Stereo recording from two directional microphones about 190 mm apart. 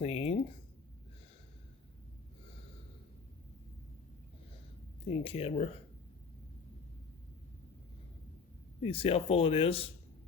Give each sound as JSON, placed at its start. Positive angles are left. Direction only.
{"t": 0.0, "sound": "speech", "side_deg": 30}
{"t": 5.2, "sound": "speech", "side_deg": 30}
{"t": 8.8, "sound": "speech", "side_deg": 30}